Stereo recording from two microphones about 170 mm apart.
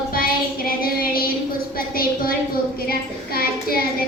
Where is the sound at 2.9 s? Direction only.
60° left (ahead or behind).